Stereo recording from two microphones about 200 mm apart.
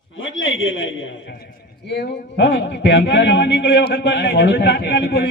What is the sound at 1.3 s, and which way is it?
A man's voice, 45° left (ahead or behind).